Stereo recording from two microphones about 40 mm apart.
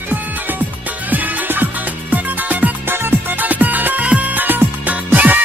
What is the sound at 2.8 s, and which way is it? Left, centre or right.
Music, right.